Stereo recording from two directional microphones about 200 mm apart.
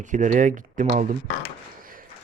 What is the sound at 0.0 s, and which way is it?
Speech, 40° right (ahead or behind).